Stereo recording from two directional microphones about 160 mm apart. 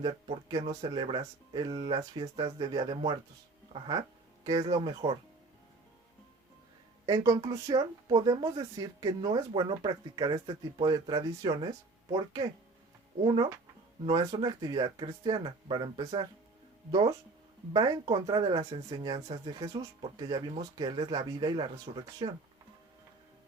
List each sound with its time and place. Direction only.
0.0 s speech: 30° right (ahead or behind)
7.0 s speech: 25° right (ahead or behind)
13.2 s speech: 30° right (ahead or behind)